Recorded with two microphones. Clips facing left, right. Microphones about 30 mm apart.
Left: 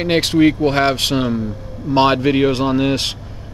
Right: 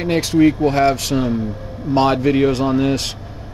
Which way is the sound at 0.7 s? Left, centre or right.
Left.